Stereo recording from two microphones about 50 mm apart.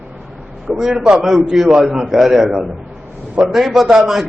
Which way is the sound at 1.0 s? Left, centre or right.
Centre.